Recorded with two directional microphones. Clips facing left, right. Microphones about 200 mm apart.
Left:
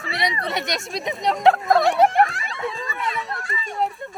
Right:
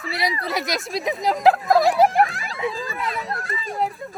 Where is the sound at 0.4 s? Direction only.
Centre (ahead or behind).